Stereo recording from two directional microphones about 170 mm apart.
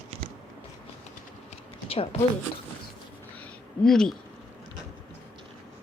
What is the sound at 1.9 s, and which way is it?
Speech, 35° left (ahead or behind).